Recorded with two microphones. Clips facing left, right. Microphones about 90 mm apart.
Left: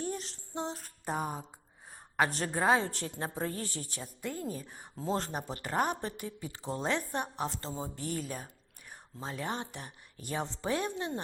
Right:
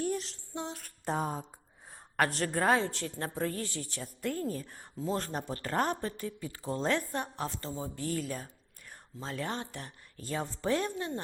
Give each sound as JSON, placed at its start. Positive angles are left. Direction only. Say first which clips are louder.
{"t": 0.0, "sound": "female singing", "louder": "right 4 dB", "side_deg": 35}
{"t": 1.0, "sound": "a woman's voice", "louder": "right 2 dB", "side_deg": 10}
{"t": 2.5, "sound": "a woman's voice", "louder": "even", "side_deg": 15}
{"t": 2.8, "sound": "a woman's voice", "louder": "right 2 dB", "side_deg": 40}
{"t": 3.2, "sound": "a woman's voice", "louder": "right 2 dB", "side_deg": 20}
{"t": 3.6, "sound": "a woman's voice", "louder": "right 1 dB", "side_deg": 40}
{"t": 4.2, "sound": "a woman's voice", "louder": "right 4 dB", "side_deg": 10}
{"t": 4.9, "sound": "a woman's voice", "louder": "even", "side_deg": 30}
{"t": 5.3, "sound": "a woman's voice", "louder": "right 1 dB", "side_deg": 15}
{"t": 6.0, "sound": "a woman's voice", "louder": "right 2 dB", "side_deg": 20}